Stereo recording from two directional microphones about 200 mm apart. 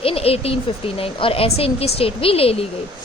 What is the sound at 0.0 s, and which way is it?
A woman's voice, 30° left (ahead or behind).